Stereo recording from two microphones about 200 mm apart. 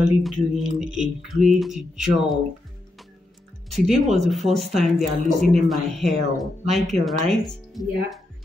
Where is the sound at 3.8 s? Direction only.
Centre (ahead or behind).